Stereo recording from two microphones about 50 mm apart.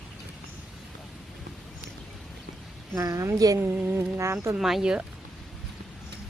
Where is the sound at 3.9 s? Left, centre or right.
Right.